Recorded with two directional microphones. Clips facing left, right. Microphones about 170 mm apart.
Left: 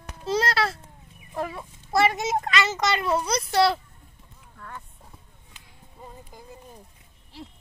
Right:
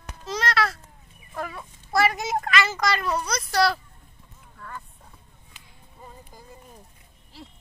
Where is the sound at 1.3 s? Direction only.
25° left (ahead or behind).